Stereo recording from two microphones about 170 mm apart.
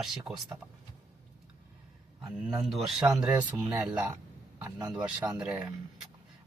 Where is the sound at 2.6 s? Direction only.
Centre (ahead or behind).